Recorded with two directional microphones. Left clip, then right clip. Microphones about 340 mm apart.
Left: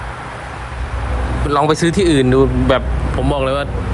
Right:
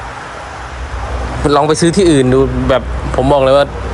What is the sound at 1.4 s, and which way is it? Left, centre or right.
Speech, centre.